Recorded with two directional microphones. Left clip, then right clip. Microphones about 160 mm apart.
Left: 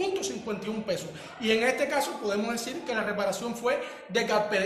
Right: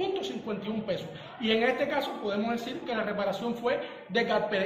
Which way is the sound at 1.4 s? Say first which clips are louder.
Left 1 dB; 15° left (ahead or behind).